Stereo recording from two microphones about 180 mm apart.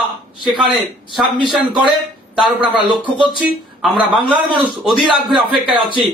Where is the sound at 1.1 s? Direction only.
Centre (ahead or behind).